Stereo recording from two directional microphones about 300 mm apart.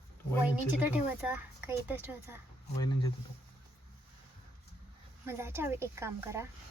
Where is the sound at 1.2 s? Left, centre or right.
Centre.